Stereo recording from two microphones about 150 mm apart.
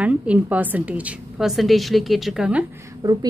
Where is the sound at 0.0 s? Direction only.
10° right (ahead or behind).